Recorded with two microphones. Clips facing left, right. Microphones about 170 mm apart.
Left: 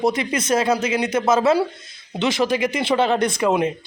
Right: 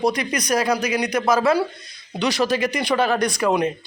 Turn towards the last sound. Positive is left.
turn(degrees=20)  # may be behind; listen again after turning